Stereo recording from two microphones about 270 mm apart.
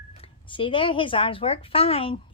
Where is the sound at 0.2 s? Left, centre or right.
Centre.